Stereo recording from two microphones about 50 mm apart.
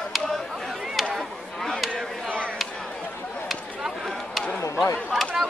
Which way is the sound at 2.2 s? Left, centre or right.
Left.